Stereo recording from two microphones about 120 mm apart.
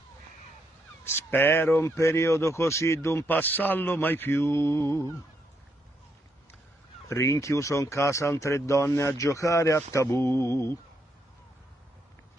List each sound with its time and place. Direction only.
1.0 s speech: 20° left (ahead or behind)
7.1 s speech: 25° left (ahead or behind)